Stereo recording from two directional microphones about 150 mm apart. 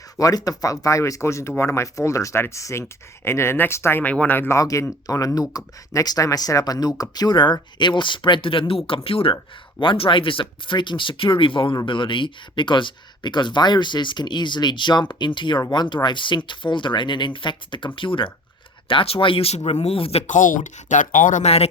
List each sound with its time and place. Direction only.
0.2 s speech: 25° left (ahead or behind); by 21.4 s 60° left (ahead or behind)
21.4 s speech: 45° left (ahead or behind)